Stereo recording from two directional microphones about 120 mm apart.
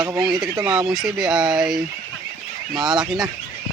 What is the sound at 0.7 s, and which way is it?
Speech, 5° right (ahead or behind).